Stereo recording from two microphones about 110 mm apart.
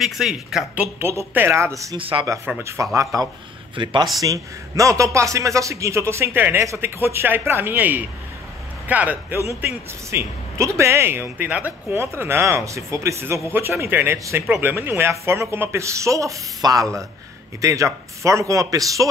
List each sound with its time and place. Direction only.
0.0 s speech: 5° right (ahead or behind)
0.9 s a man's voice: 20° right (ahead or behind)
2.0 s speech: 55° right (ahead or behind)
2.6 s a man's voice: 30° right (ahead or behind)
3.7 s speech: 45° right (ahead or behind)
4.2 s a man's voice: 30° right (ahead or behind); by 11.7 s 10° right (ahead or behind)
11.9 s a man's voice: 25° right (ahead or behind)